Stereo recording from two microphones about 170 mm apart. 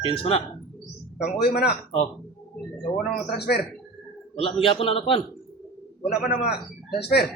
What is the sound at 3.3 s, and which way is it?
Speech, 70° left (ahead or behind).